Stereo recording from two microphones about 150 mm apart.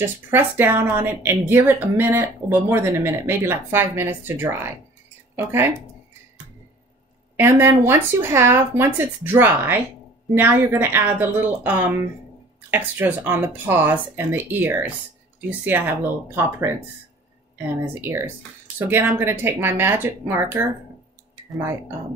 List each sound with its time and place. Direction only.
0.0 s a woman's voice: 15° right (ahead or behind)
7.3 s a woman's voice: 15° right (ahead or behind)
17.7 s a woman's voice: 15° right (ahead or behind)